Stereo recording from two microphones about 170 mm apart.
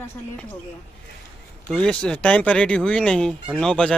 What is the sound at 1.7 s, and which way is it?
Speech, 5° left (ahead or behind).